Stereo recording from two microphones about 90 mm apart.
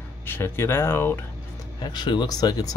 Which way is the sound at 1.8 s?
55° left (ahead or behind).